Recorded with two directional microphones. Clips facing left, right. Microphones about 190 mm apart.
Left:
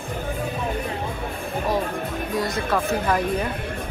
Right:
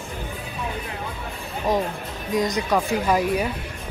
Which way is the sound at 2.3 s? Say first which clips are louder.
Right 3 dB; 15° right (ahead or behind).